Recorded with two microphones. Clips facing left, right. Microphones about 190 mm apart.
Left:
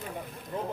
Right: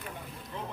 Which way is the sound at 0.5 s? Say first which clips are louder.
Left 6 dB; 45° left (ahead or behind).